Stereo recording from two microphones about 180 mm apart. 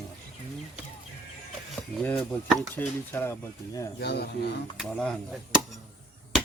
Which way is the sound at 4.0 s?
65° left (ahead or behind).